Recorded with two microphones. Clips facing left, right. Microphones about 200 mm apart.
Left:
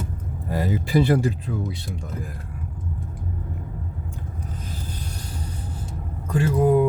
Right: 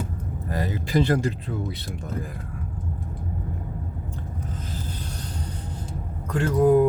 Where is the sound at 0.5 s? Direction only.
10° left (ahead or behind).